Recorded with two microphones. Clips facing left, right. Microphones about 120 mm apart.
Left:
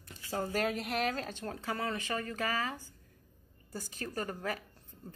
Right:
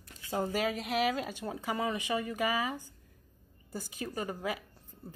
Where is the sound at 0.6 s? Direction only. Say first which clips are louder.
Right 1 dB; centre (ahead or behind).